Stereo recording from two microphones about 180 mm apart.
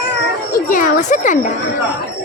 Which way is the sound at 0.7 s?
45° left (ahead or behind).